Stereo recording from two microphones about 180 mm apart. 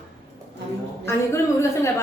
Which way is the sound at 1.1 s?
15° left (ahead or behind).